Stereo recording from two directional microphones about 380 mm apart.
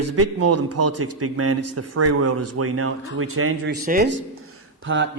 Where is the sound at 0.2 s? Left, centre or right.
Right.